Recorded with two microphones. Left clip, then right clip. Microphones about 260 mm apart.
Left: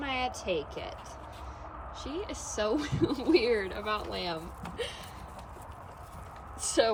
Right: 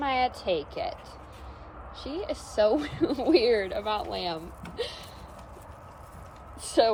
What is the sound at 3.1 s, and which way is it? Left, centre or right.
Speech, centre.